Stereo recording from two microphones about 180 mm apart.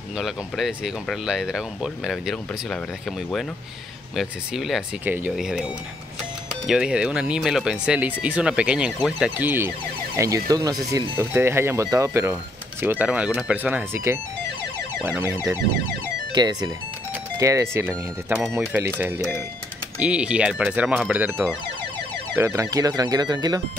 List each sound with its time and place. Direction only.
0.2 s speech: centre (ahead or behind)
6.7 s speech: 5° right (ahead or behind); by 23.6 s 25° right (ahead or behind)